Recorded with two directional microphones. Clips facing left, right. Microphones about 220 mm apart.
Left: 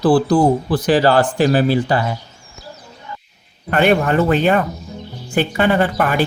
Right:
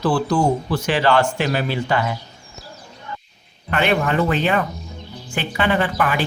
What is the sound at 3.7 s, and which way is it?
A woman's voice, 45° left (ahead or behind).